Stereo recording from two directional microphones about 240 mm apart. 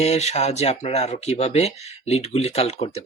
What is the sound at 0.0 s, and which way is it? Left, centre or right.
Speech, left.